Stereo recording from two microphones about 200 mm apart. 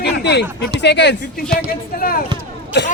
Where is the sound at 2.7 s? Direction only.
60° left (ahead or behind).